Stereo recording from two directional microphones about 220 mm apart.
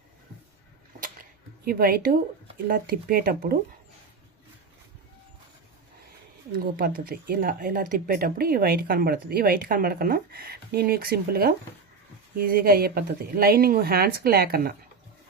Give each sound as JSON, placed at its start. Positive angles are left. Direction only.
{"t": 1.6, "sound": "speech", "side_deg": -40}
{"t": 6.7, "sound": "speech", "side_deg": -40}